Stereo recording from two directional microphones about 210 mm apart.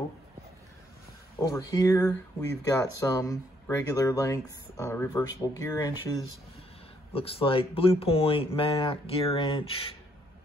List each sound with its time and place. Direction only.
1.5 s speech: 15° left (ahead or behind)
7.1 s speech: 25° left (ahead or behind)